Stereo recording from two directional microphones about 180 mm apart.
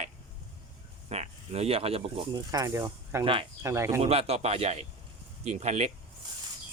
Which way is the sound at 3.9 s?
35° right (ahead or behind).